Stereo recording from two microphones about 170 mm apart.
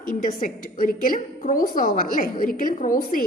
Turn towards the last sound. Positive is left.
turn(degrees=55)  # may be behind; listen again after turning